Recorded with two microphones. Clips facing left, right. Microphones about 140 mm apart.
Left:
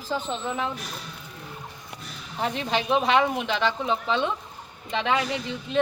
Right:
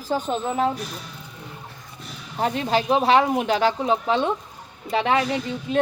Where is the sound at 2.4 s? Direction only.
40° right (ahead or behind).